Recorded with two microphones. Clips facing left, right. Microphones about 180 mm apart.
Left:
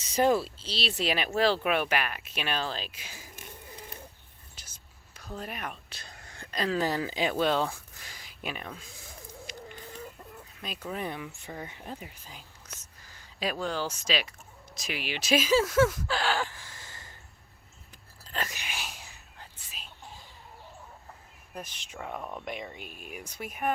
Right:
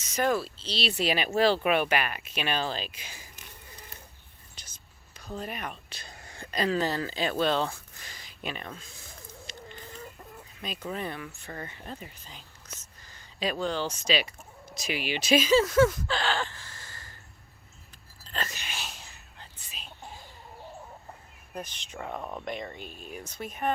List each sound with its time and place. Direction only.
0.1 s speech: 25° left (ahead or behind)
0.6 s speech: 5° left (ahead or behind)
4.5 s whispering: 5° left (ahead or behind)
6.8 s speech: 15° left (ahead or behind)
9.5 s chicken: 10° left (ahead or behind)
10.6 s speech: centre (ahead or behind)
11.0 s speech: 15° left (ahead or behind)
18.3 s whispering: 10° left (ahead or behind)
21.5 s speech: 5° left (ahead or behind)
22.4 s speech: 5° left (ahead or behind)